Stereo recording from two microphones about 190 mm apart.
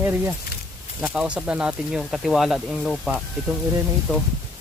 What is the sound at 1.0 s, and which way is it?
Speech, 5° right (ahead or behind).